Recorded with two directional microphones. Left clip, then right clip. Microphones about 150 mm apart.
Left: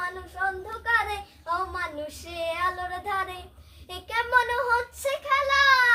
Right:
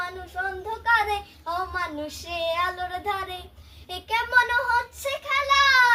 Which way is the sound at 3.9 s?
20° left (ahead or behind).